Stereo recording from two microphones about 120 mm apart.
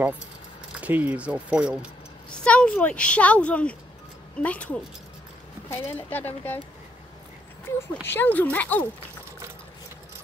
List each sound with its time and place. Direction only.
0.7 s speech: 15° right (ahead or behind)
2.4 s a woman's voice: 10° left (ahead or behind)
7.6 s a woman's voice: 20° left (ahead or behind)